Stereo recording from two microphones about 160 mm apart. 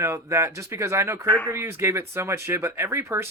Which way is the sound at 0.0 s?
15° right (ahead or behind).